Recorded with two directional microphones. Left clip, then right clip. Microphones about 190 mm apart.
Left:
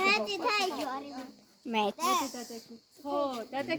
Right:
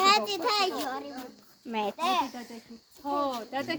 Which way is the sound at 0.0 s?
50° right (ahead or behind).